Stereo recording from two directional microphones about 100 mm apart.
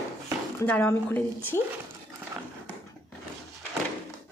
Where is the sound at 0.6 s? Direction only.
15° left (ahead or behind).